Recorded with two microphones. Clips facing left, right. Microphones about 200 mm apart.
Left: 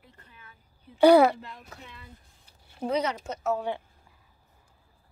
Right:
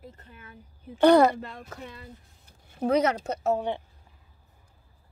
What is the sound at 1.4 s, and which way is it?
Speech, 50° right (ahead or behind).